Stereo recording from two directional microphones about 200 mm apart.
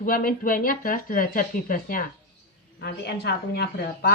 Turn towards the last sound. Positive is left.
turn(degrees=50)  # may be behind; listen again after turning